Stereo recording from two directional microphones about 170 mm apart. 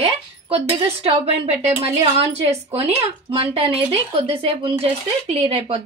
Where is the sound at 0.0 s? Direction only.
35° right (ahead or behind).